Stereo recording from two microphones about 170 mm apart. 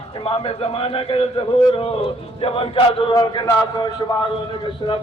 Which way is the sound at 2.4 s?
35° left (ahead or behind).